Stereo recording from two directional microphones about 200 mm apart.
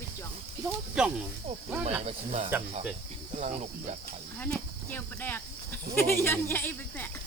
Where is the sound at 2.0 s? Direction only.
30° right (ahead or behind).